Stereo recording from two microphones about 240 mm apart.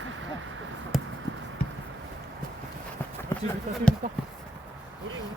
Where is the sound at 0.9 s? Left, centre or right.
Centre.